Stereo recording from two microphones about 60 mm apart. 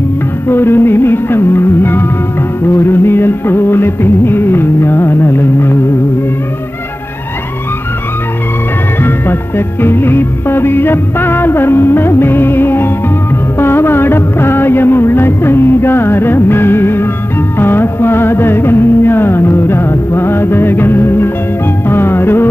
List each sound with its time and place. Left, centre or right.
0.5 s music: left
9.0 s music: left
13.6 s music of bollywood: left
17.6 s music: left